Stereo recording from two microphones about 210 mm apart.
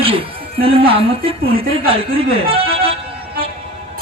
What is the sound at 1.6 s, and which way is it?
Speech, 25° right (ahead or behind).